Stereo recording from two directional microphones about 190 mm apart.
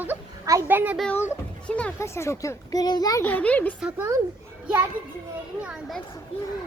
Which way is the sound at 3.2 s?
10° left (ahead or behind).